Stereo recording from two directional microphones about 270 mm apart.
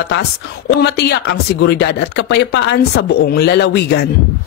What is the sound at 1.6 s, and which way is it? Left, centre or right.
Speech, left.